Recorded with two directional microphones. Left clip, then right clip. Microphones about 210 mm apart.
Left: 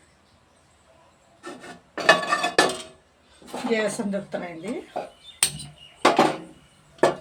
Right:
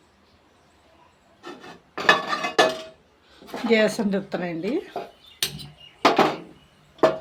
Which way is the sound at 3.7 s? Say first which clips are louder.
Right 5 dB; 40° right (ahead or behind).